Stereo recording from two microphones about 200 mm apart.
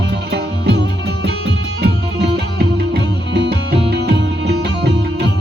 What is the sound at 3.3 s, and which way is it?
Music, 60° right (ahead or behind).